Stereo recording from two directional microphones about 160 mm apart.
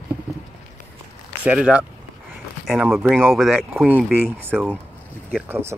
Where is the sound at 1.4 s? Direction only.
5° right (ahead or behind).